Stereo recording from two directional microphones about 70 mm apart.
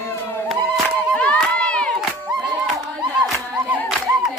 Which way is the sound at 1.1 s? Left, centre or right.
Left.